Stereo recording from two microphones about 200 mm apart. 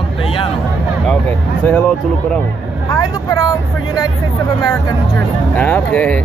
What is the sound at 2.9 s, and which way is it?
Speech, 20° left (ahead or behind).